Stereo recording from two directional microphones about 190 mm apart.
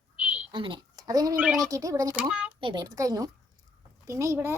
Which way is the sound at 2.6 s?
25° right (ahead or behind).